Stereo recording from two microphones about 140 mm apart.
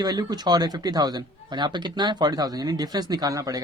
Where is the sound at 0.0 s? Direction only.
30° right (ahead or behind).